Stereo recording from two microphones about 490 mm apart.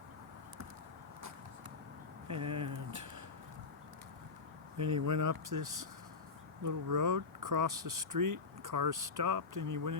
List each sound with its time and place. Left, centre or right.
2.2 s speech: right
4.8 s speech: right